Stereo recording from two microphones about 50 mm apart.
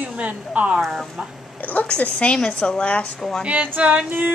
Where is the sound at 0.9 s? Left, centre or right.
Centre.